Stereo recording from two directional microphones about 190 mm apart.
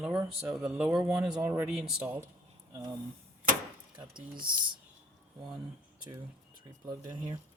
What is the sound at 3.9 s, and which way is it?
Speech, 25° right (ahead or behind).